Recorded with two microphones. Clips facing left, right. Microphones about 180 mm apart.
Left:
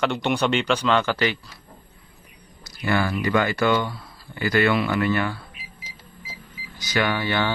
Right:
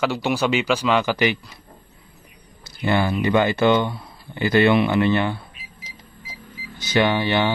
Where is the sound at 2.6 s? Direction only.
25° right (ahead or behind).